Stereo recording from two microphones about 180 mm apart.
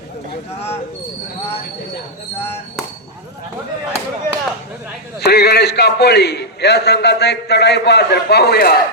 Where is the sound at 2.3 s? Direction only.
10° left (ahead or behind).